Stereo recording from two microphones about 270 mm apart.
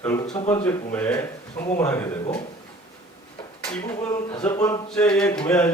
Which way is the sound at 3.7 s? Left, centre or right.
Centre.